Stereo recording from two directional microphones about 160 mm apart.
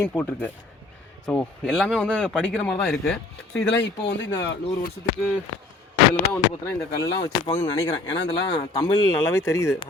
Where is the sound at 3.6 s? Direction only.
90° left.